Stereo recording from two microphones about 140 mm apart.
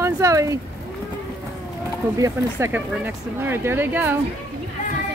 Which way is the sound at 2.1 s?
25° right (ahead or behind).